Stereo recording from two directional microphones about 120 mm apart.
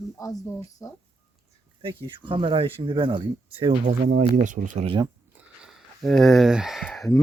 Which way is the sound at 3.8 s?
80° right.